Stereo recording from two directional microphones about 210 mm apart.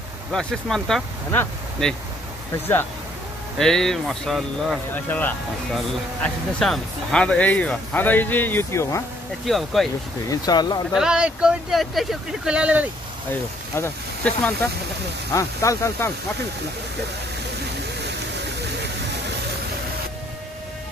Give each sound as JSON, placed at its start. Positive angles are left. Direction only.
{"t": 0.3, "sound": "speech", "side_deg": 0}
{"t": 3.5, "sound": "speech", "side_deg": 0}
{"t": 9.5, "sound": "speech", "side_deg": 0}
{"t": 10.3, "sound": "speech", "side_deg": 20}
{"t": 10.9, "sound": "speech", "side_deg": -5}
{"t": 13.3, "sound": "speech", "side_deg": 10}